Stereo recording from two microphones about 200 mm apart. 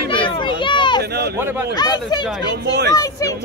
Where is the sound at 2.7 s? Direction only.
55° right (ahead or behind).